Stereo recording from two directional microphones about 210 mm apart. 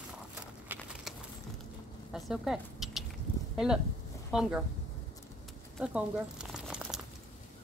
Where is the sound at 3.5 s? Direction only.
5° right (ahead or behind).